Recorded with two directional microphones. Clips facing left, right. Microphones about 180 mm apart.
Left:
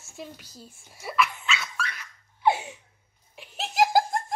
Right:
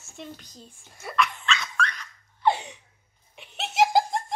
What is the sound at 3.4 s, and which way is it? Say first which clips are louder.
Laughter: right 1 dB; centre (ahead or behind).